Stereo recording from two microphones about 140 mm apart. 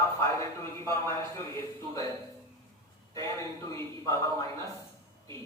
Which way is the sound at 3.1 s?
25° left (ahead or behind).